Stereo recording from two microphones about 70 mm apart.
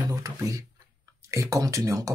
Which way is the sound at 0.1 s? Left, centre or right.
Right.